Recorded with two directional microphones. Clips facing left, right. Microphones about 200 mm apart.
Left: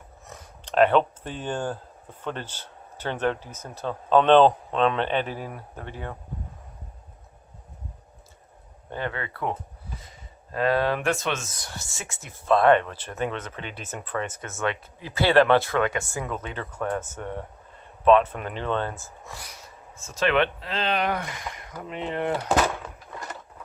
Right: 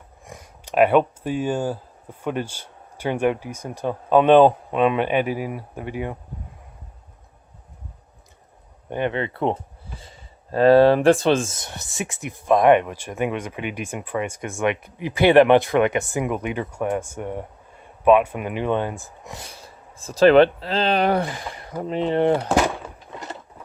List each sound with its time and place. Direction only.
0.3 s speech: 10° right (ahead or behind)
8.9 s speech: 20° right (ahead or behind)
23.1 s sewing machine: 25° right (ahead or behind)